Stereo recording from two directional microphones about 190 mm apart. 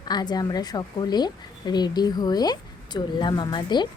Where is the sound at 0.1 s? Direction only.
20° left (ahead or behind).